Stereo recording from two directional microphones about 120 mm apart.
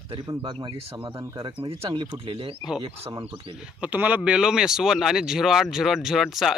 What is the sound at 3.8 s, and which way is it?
Speech, 15° right (ahead or behind).